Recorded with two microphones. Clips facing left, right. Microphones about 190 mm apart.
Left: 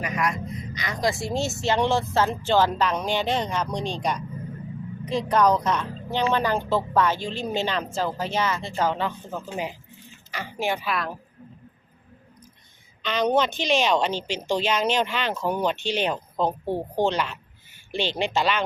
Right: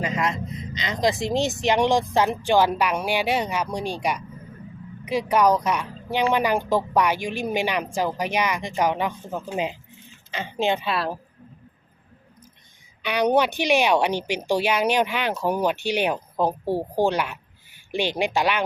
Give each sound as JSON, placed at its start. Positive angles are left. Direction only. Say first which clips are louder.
{"t": 0.0, "sound": "a woman's voice", "louder": "right 2 dB", "side_deg": -25}
{"t": 13.0, "sound": "a woman's voice", "louder": "right 2 dB", "side_deg": -10}